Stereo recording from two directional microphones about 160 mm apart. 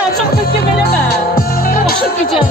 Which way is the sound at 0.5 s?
80° left.